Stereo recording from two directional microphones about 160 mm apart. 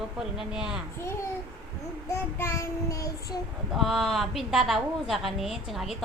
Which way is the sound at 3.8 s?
Centre (ahead or behind).